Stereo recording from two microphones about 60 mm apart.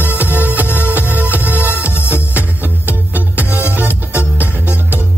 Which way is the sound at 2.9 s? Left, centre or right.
Right.